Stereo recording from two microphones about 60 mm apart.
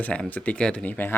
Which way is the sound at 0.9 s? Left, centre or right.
Left.